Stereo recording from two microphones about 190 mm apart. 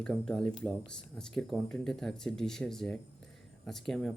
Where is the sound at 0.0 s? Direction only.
5° left (ahead or behind).